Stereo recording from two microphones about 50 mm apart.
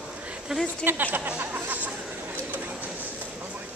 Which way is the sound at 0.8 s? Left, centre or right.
Right.